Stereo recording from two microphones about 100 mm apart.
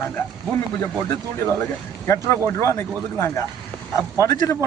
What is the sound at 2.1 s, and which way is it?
Speech, 30° left (ahead or behind).